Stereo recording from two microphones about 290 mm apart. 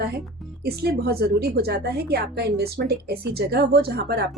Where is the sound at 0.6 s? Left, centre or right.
Right.